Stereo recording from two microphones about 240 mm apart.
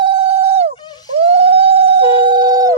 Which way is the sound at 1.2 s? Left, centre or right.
Right.